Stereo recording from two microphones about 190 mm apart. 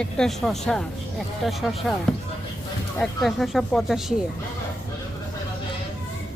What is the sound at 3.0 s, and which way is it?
Speech, centre (ahead or behind).